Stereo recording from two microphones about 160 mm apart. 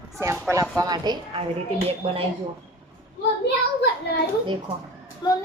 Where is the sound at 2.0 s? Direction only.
40° right (ahead or behind).